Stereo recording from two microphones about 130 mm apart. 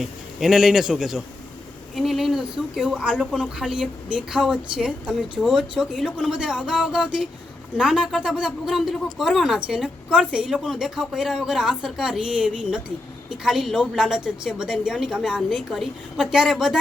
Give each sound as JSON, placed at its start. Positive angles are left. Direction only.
{"t": 0.0, "sound": "speech", "side_deg": -5}